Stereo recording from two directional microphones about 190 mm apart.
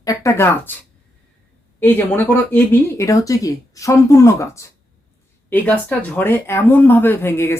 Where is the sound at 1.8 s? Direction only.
10° left (ahead or behind).